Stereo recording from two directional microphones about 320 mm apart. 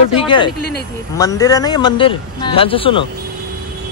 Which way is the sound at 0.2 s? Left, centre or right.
Centre.